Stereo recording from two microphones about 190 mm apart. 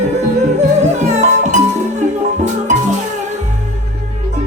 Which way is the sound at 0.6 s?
40° right (ahead or behind).